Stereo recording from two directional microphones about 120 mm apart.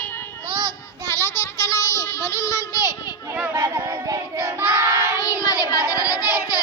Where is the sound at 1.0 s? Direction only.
20° left (ahead or behind).